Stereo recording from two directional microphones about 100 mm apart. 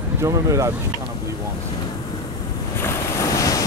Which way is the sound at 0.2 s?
30° right (ahead or behind).